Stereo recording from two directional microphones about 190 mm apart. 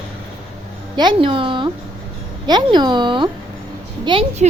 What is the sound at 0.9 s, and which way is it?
A woman's voice, 25° right (ahead or behind).